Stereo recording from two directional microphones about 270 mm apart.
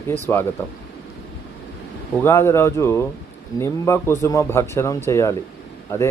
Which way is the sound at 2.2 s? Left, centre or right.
Centre.